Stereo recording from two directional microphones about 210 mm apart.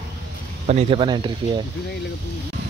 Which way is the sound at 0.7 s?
30° right (ahead or behind).